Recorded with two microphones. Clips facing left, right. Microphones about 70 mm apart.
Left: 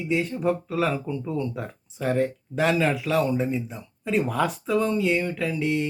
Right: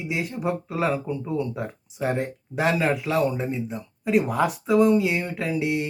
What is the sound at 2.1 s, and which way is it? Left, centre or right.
A man's voice, centre.